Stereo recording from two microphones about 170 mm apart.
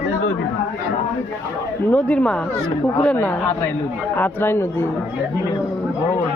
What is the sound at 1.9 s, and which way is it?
A woman's voice, 5° left (ahead or behind).